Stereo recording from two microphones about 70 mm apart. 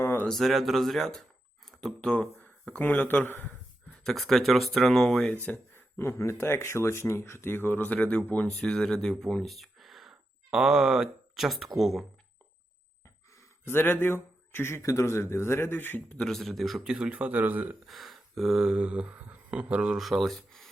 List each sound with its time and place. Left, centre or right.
0.3 s speech: centre
1.6 s a sound: centre
2.0 s speech: centre
4.0 s speech: centre
5.3 s speech: left
6.0 s speech: left; by 12.0 s centre
13.7 s speech: left
16.1 s speech: centre
17.1 s speech: right
17.8 s speech: centre
20.0 s speech: centre